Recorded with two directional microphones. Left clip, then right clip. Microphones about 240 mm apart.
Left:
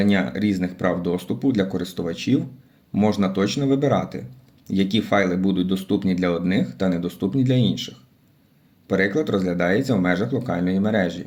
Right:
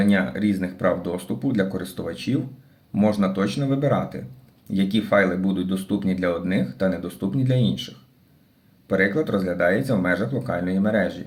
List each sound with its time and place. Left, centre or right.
0.0 s speech: left
8.9 s speech: left